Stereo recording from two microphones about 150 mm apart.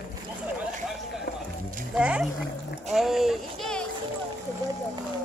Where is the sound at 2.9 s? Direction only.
Centre (ahead or behind).